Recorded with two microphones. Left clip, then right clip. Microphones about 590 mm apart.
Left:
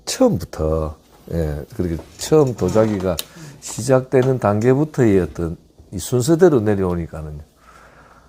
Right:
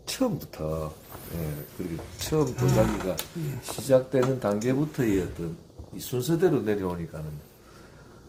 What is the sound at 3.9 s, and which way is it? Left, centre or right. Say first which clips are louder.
Speech: left 7 dB; left.